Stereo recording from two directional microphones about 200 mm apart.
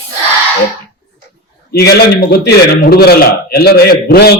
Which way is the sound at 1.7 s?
50° left (ahead or behind).